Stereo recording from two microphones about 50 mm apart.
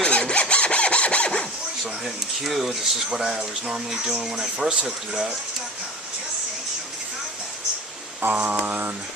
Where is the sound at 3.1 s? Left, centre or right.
Centre.